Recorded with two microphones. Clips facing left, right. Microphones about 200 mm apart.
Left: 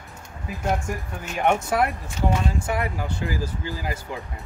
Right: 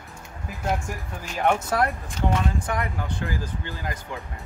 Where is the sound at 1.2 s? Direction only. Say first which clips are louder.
Left 1 dB; 5° left (ahead or behind).